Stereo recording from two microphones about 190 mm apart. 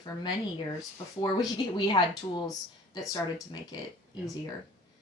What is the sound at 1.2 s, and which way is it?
Speech, 20° left (ahead or behind).